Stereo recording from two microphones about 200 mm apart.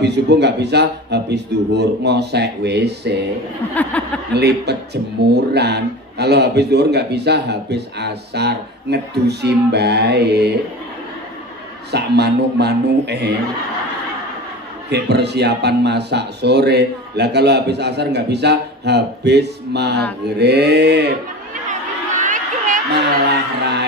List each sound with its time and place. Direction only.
0.0 s speech: 60° right (ahead or behind)
3.9 s speech: 10° left (ahead or behind)
4.3 s speech: 55° right (ahead or behind)
11.9 s speech: 55° right (ahead or behind)
14.9 s speech: 55° right (ahead or behind)
22.1 s a sound: 40° right (ahead or behind)
23.6 s a sound: 60° right (ahead or behind)